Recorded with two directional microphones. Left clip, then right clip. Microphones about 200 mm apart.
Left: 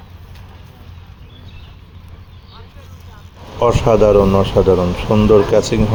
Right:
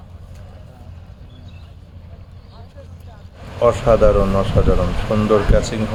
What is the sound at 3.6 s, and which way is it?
Speech, 25° left (ahead or behind).